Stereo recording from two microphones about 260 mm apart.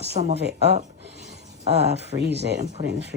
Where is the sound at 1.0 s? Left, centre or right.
Right.